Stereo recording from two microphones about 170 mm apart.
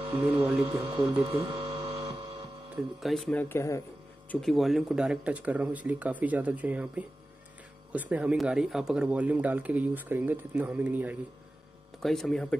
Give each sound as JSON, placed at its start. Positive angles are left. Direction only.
{"t": 0.0, "sound": "speech", "side_deg": -35}
{"t": 1.2, "sound": "mechanisms", "side_deg": -35}
{"t": 2.7, "sound": "speech", "side_deg": 0}
{"t": 3.3, "sound": "speech", "side_deg": 15}
{"t": 4.3, "sound": "speech", "side_deg": 0}
{"t": 12.0, "sound": "speech", "side_deg": 0}